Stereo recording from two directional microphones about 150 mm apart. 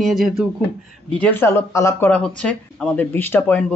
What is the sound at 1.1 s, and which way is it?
A woman's voice, 10° left (ahead or behind).